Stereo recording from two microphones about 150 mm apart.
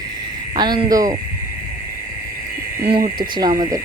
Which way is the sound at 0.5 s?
30° right (ahead or behind).